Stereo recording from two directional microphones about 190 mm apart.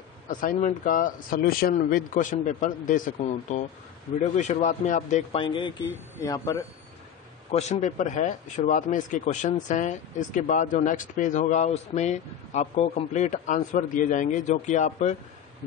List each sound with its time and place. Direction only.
0.3 s speech: 45° left (ahead or behind); by 6.6 s 20° left (ahead or behind)
7.5 s speech: 35° left (ahead or behind)